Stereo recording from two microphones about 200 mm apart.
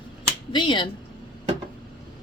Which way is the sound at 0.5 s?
25° left (ahead or behind).